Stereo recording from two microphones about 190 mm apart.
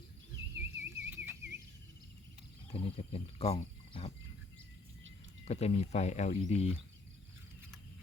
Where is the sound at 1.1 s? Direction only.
10° right (ahead or behind).